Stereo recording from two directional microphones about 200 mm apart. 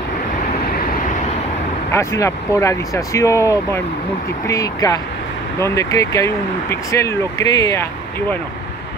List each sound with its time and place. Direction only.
1.9 s speech: 15° left (ahead or behind)